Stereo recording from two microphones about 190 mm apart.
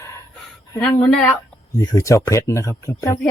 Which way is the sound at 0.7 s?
10° left (ahead or behind).